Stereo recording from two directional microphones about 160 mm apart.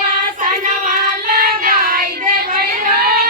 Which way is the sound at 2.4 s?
65° right (ahead or behind).